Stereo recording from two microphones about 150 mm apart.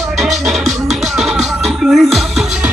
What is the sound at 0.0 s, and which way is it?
Music, centre (ahead or behind).